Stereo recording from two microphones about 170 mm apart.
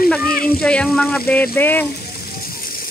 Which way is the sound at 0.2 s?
60° left (ahead or behind).